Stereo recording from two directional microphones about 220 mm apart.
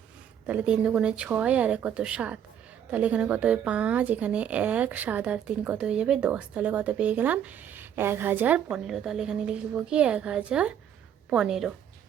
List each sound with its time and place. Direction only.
0.4 s speech: 5° right (ahead or behind)